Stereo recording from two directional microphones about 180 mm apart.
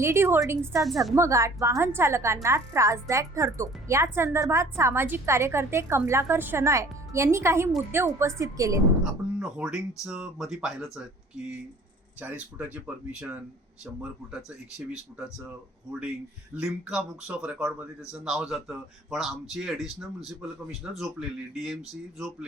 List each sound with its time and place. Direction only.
0.0 s a woman's voice: 15° right (ahead or behind)
9.4 s a man's voice: 5° right (ahead or behind)
14.8 s a man's voice: 5° right (ahead or behind)